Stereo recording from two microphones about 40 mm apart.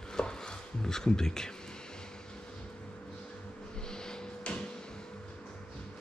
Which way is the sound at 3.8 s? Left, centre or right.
Centre.